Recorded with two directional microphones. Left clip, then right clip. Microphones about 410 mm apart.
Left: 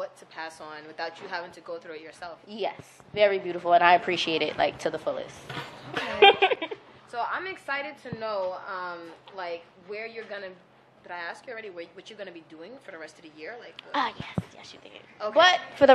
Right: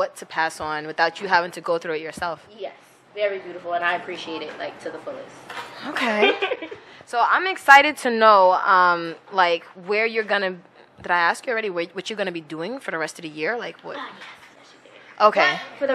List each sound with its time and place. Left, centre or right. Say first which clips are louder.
0.0 s a woman's voice: right 13 dB; right
2.6 s a woman's voice: left 3 dB; left
6.1 s speech: left 4 dB; left
7.1 s a woman's voice: right 12 dB; right
15.1 s a woman's voice: right 6 dB; right
15.8 s a woman's voice: left 6 dB; left